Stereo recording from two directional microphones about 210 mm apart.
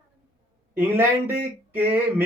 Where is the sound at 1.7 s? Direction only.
10° right (ahead or behind).